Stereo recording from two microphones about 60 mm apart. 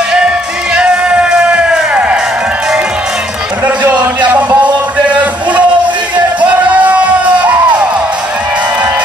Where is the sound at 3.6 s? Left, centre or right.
Right.